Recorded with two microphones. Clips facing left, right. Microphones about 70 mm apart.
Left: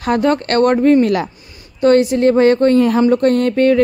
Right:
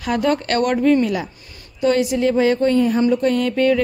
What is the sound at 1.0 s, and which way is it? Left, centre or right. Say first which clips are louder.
Speech: left 6 dB; left.